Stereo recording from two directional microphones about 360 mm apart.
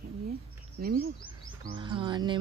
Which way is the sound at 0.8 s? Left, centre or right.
Right.